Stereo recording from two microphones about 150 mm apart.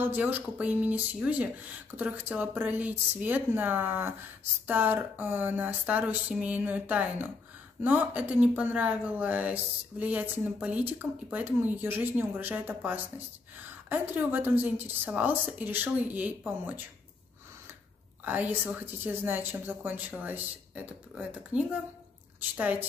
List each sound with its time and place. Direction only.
0.0 s speech: 10° right (ahead or behind)
18.2 s speech: 10° right (ahead or behind)